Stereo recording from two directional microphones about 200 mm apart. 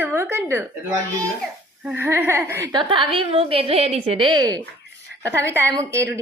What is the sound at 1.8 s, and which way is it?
Speech, 10° right (ahead or behind).